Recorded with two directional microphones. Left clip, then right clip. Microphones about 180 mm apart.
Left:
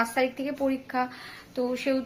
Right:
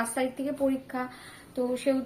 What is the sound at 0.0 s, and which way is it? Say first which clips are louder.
Speech: left 4 dB; 5° left (ahead or behind).